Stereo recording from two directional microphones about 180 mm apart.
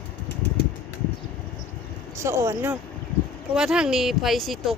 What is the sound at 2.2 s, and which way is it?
Speech, 15° right (ahead or behind).